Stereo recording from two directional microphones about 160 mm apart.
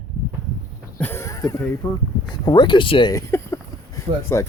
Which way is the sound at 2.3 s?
25° left (ahead or behind).